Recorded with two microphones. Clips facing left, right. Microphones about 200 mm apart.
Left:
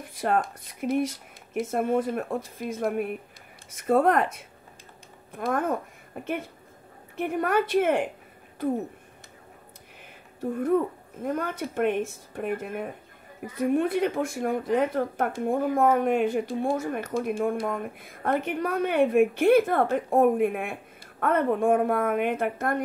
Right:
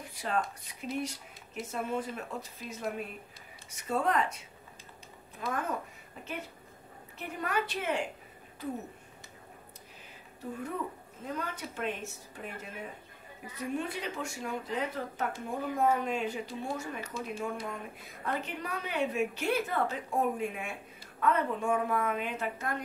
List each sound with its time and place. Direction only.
0.2 s speech: 50° left (ahead or behind)
5.3 s a woman's voice: 55° left (ahead or behind)
11.2 s speech: 55° left (ahead or behind)